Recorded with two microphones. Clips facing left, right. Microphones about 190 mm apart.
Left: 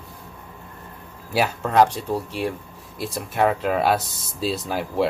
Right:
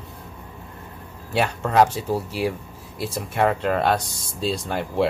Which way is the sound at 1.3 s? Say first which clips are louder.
Even; 5° left (ahead or behind).